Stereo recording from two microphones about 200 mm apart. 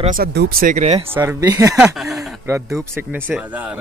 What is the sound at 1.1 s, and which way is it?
Speech, 10° right (ahead or behind).